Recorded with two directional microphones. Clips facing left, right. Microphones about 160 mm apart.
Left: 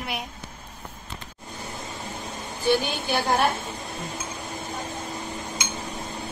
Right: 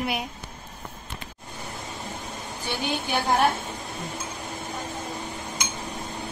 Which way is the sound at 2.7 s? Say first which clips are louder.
Left 5 dB; 15° right (ahead or behind).